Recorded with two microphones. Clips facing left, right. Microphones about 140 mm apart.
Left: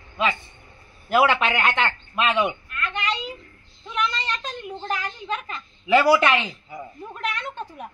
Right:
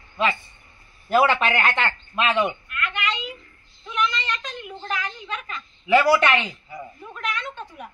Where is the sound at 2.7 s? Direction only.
30° left (ahead or behind).